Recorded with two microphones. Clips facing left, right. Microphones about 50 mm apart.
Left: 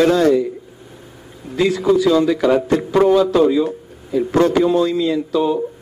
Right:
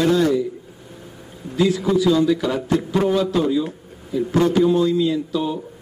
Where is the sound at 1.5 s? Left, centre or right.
Left.